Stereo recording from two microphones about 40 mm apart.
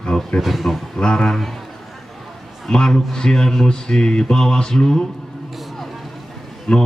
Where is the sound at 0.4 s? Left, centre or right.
Centre.